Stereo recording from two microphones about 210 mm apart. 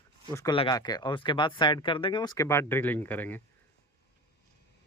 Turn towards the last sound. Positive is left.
turn(degrees=10)  # may be behind; listen again after turning